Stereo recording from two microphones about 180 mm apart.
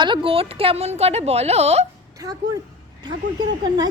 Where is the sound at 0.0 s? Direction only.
30° right (ahead or behind).